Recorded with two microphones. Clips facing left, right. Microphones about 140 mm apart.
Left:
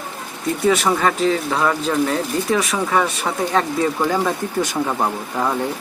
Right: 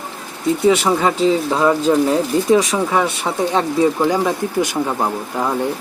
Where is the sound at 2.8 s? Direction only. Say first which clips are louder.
Right 2 dB; 10° right (ahead or behind).